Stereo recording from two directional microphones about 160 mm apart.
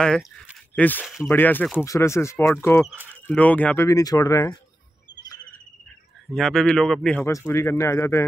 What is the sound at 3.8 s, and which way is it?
Speech, 20° left (ahead or behind).